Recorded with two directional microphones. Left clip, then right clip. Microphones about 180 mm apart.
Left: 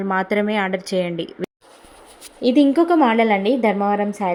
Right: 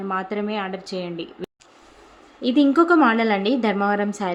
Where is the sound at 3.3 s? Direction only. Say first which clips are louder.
Left 3 dB; 10° left (ahead or behind).